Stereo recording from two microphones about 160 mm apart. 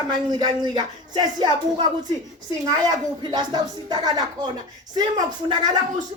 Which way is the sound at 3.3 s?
25° right (ahead or behind).